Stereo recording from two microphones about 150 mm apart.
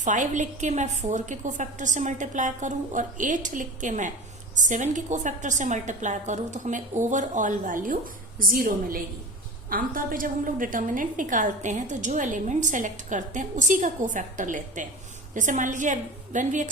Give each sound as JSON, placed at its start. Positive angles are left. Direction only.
{"t": 0.0, "sound": "a woman's voice", "side_deg": -55}